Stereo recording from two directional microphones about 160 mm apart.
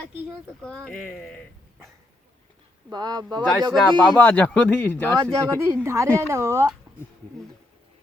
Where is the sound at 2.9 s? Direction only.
25° right (ahead or behind).